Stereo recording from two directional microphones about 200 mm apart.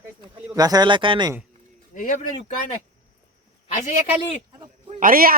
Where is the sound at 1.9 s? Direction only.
40° left (ahead or behind).